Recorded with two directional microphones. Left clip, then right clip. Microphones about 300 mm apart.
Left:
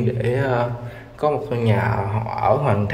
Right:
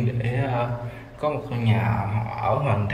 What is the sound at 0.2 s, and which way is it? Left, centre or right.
Speech, centre.